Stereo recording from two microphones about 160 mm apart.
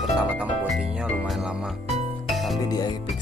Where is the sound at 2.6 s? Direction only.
25° left (ahead or behind).